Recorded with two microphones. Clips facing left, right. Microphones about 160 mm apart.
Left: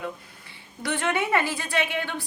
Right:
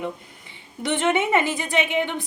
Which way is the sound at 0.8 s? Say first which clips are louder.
Right 5 dB; 20° right (ahead or behind).